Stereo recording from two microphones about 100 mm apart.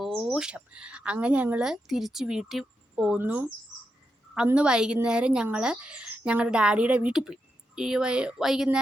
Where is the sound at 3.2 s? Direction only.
15° right (ahead or behind).